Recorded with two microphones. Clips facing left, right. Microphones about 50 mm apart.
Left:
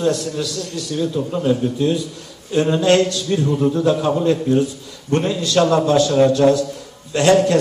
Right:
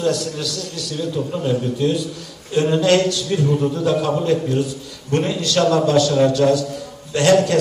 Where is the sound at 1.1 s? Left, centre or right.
Centre.